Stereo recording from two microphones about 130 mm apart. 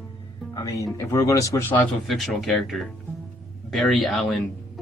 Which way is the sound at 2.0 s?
Centre (ahead or behind).